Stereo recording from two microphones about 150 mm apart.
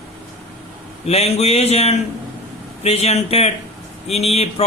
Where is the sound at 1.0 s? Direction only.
45° left (ahead or behind).